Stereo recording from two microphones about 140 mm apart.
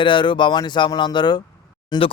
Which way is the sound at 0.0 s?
35° left (ahead or behind).